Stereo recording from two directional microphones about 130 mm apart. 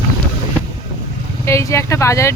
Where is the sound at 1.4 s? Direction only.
20° left (ahead or behind).